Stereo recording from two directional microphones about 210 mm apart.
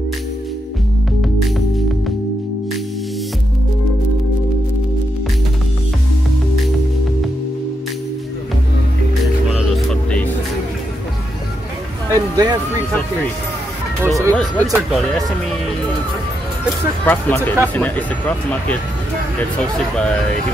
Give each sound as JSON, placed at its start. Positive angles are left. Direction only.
{"t": 12.1, "sound": "music", "side_deg": -20}
{"t": 14.0, "sound": "speech", "side_deg": -15}
{"t": 14.3, "sound": "speech", "side_deg": 0}
{"t": 17.0, "sound": "speech", "side_deg": 10}